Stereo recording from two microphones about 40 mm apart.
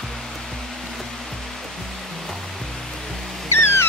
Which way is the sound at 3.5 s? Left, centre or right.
Left.